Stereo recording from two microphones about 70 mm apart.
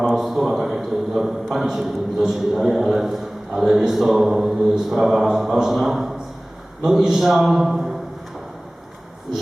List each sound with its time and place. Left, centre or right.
0.1 s a man's voice: centre